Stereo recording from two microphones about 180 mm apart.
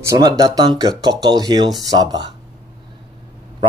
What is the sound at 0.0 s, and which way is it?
Speech, 20° right (ahead or behind).